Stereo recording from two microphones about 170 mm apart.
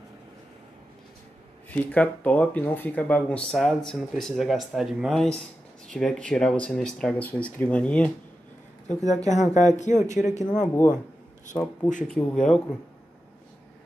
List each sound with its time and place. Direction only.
1.7 s speech: 10° left (ahead or behind)
8.8 s speech: 45° left (ahead or behind)
11.5 s speech: 10° left (ahead or behind)